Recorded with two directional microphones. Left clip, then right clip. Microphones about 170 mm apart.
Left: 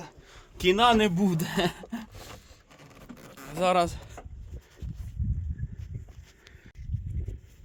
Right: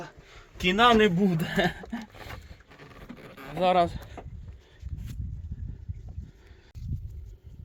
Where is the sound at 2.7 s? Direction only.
25° left (ahead or behind).